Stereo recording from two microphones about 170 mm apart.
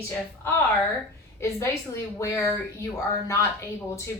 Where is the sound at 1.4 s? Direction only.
15° left (ahead or behind).